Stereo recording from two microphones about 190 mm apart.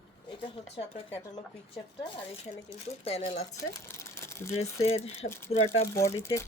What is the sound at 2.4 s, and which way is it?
Speech, 35° left (ahead or behind).